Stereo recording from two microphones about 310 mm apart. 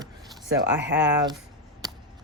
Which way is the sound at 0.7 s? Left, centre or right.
Right.